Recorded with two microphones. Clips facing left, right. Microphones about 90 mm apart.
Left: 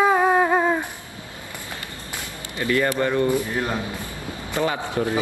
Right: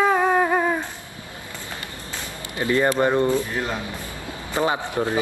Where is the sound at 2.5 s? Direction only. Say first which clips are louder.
Right 2 dB; 20° right (ahead or behind).